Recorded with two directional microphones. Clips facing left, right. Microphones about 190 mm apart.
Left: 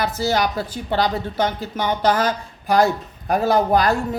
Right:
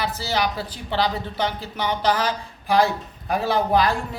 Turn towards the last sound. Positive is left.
turn(degrees=45)  # may be behind; listen again after turning